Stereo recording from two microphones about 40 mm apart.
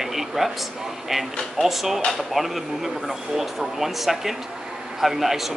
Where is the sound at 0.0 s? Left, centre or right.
Centre.